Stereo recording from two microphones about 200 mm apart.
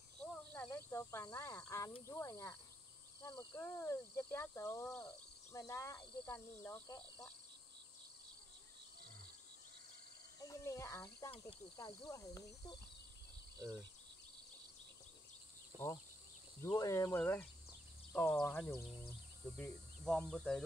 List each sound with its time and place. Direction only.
0.2 s a sound: 5° left (ahead or behind)
2.0 s speech: 15° left (ahead or behind)
3.5 s speech: 10° left (ahead or behind)
10.4 s speech: 15° left (ahead or behind)
15.7 s speech: 15° right (ahead or behind)
16.6 s speech: 20° left (ahead or behind)